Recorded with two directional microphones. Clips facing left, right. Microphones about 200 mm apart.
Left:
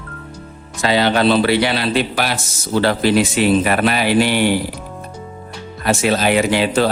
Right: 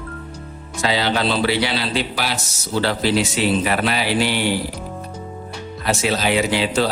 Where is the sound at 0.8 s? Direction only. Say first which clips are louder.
Left 5 dB; 55° left (ahead or behind).